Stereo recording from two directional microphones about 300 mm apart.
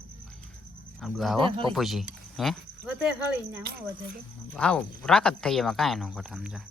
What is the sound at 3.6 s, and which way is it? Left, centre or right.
Speech, right.